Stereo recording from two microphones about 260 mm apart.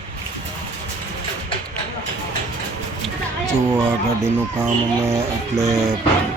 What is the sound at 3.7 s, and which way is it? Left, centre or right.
Speech, centre.